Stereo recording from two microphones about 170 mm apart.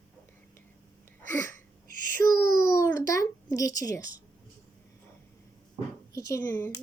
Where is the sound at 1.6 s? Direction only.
50° right (ahead or behind).